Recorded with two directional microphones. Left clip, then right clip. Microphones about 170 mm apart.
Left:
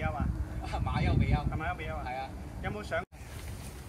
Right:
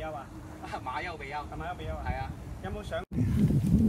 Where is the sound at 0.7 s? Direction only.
50° left (ahead or behind).